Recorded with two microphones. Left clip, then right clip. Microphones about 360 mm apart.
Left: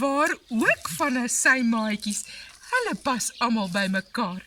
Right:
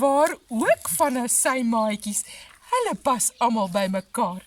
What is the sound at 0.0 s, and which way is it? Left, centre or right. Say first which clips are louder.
Speech: right 4 dB; right.